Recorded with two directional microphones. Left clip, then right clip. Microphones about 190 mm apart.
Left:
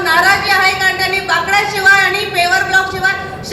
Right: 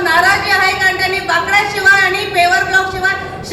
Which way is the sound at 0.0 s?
25° right (ahead or behind).